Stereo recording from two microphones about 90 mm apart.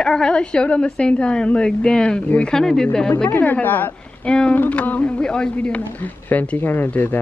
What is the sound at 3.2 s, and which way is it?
A woman's voice, 20° left (ahead or behind).